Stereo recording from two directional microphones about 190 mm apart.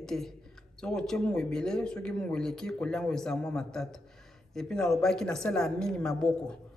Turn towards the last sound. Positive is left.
turn(degrees=5)  # may be behind; listen again after turning